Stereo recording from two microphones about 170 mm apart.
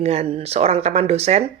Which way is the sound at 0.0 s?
40° right (ahead or behind).